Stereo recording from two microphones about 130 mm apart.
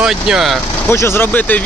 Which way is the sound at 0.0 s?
5° right (ahead or behind).